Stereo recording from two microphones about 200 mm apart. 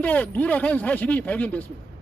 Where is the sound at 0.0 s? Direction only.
5° left (ahead or behind).